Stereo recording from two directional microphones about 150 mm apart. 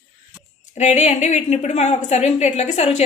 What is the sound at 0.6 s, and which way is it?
A woman's voice, 50° left (ahead or behind).